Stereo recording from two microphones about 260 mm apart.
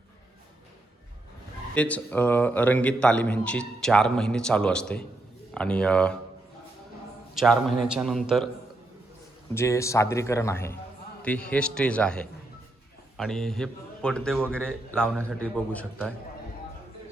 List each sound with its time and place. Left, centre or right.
1.7 s a man's voice: centre
7.3 s a man's voice: centre
9.6 s a man's voice: centre